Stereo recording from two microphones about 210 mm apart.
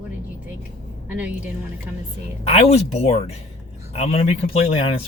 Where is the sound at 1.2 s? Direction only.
5° right (ahead or behind).